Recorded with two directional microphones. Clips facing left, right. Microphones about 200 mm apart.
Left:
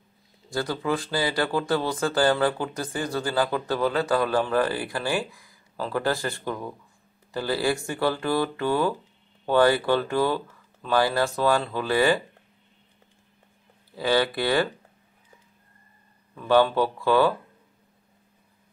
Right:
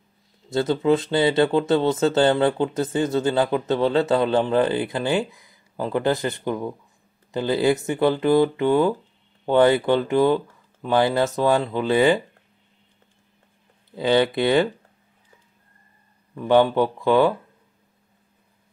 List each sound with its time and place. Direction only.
0.5 s speech: 25° right (ahead or behind)
13.9 s speech: 20° right (ahead or behind)
16.3 s speech: 20° right (ahead or behind)